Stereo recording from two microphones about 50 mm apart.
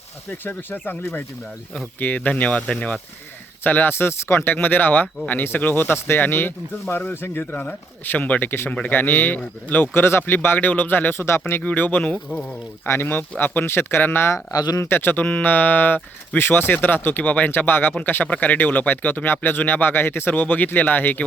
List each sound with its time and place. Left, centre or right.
0.4 s speech: left
3.6 s speech: left
5.7 s speech: left
6.1 s speech: left
7.5 s speech: left
8.4 s speech: left
11.6 s speech: left
12.3 s speech: centre
12.9 s speech: left
14.3 s speech: left
15.2 s speech: left